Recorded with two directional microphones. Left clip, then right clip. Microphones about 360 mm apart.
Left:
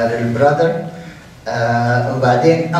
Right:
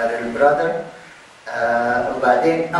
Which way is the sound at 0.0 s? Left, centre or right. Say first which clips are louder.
Left 2 dB; centre.